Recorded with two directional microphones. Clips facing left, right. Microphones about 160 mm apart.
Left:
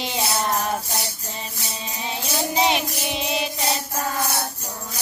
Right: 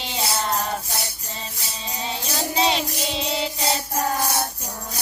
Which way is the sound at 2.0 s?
15° left (ahead or behind).